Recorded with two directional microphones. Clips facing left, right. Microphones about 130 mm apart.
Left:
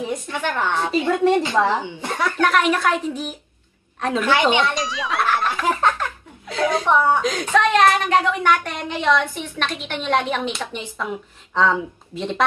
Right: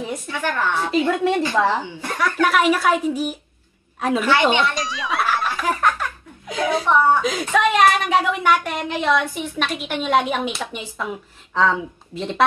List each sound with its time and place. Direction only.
0.3 s a woman's voice: 20° left (ahead or behind)
1.1 s speech: centre (ahead or behind)
2.0 s speech: 25° left (ahead or behind)
2.4 s a woman's voice: 5° right (ahead or behind)
4.5 s speech: 20° left (ahead or behind)
4.7 s speech: centre (ahead or behind)
5.5 s giggle: 25° left (ahead or behind)
6.4 s a woman's voice: 15° right (ahead or behind)